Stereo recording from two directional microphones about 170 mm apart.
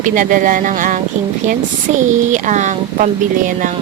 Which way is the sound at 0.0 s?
50° right (ahead or behind).